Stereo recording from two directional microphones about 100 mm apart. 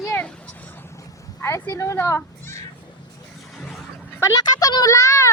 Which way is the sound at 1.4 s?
25° left (ahead or behind).